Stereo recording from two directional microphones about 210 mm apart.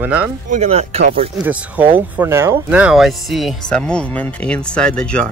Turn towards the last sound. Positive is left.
turn(degrees=5)  # may be behind; listen again after turning